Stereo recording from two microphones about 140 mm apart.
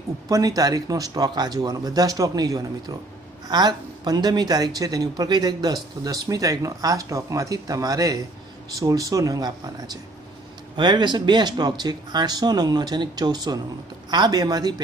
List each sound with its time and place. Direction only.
0.3 s speech: 25° right (ahead or behind)